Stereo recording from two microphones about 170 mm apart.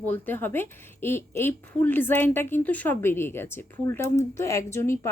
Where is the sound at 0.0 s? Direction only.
10° left (ahead or behind).